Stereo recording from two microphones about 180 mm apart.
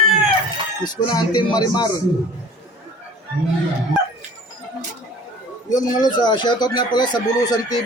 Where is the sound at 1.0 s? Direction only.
25° left (ahead or behind).